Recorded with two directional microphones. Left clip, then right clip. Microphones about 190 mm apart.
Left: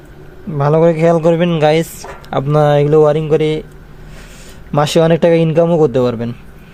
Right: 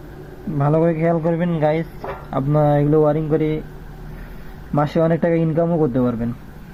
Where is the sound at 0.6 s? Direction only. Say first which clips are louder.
Left 7 dB; 90° left.